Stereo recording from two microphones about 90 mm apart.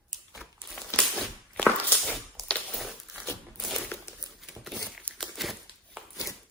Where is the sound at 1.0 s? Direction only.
10° left (ahead or behind).